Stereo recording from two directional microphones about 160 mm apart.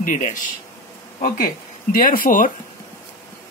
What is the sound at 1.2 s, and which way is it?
Speech, 65° left (ahead or behind).